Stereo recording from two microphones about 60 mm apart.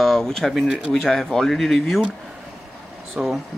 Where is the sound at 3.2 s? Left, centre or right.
Centre.